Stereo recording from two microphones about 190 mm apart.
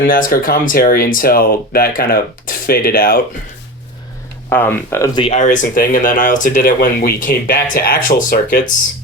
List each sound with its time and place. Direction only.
0.0 s speech: 50° left (ahead or behind)
4.4 s speech: 10° left (ahead or behind)
5.2 s speech: 35° left (ahead or behind)